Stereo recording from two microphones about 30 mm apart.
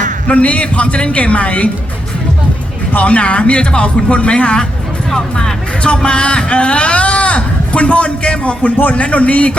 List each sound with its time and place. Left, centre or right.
0.3 s a man's voice: left
3.0 s speech: left
5.1 s speech: centre
6.0 s speech: left
8.6 s speech: left
9.0 s a man's voice: left